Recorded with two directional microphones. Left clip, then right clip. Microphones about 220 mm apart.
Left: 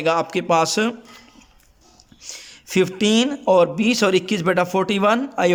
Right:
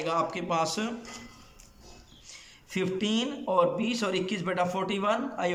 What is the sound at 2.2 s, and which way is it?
Speech, 45° left (ahead or behind).